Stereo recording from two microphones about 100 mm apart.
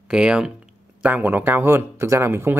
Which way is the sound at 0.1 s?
10° right (ahead or behind).